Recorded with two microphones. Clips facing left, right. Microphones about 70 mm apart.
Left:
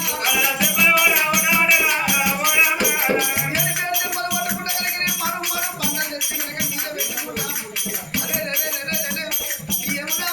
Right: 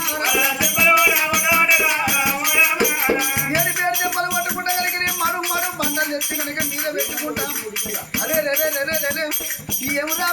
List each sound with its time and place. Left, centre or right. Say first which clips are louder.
0.6 s music: right 2 dB; centre
8.3 s music: right 10 dB; right